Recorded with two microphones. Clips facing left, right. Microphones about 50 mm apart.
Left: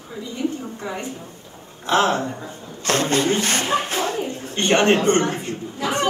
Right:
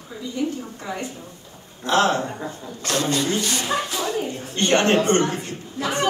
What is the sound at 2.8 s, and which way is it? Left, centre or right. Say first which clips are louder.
Speech: left 3 dB; left.